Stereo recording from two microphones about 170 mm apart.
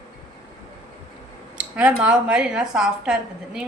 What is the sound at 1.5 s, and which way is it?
Speech, 5° right (ahead or behind).